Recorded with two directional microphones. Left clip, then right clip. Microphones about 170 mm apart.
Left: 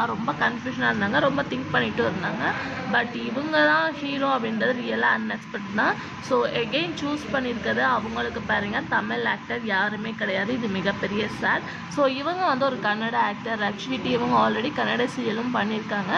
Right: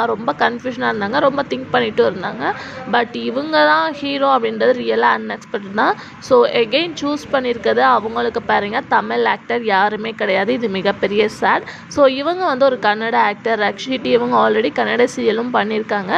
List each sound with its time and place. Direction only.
0.0 s speech: 40° right (ahead or behind)